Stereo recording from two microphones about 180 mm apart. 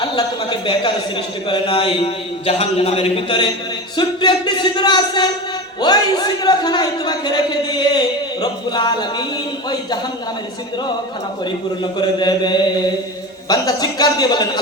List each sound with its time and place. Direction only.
0.0 s a man's voice: 25° left (ahead or behind)
11.8 s a man's voice: 25° left (ahead or behind)